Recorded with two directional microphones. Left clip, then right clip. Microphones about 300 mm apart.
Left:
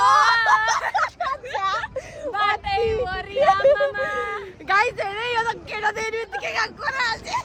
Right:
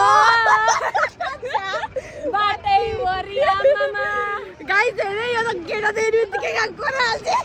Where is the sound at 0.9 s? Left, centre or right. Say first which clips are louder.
Right 1 dB; centre.